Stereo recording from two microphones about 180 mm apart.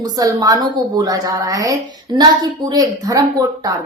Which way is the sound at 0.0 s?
20° right (ahead or behind).